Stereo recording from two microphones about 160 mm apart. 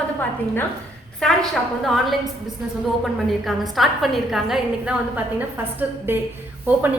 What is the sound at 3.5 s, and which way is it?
A woman's voice, centre (ahead or behind).